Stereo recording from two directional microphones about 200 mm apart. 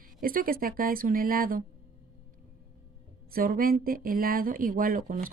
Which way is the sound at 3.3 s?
45° right (ahead or behind).